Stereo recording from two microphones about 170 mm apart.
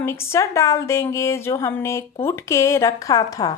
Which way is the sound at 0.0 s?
15° left (ahead or behind).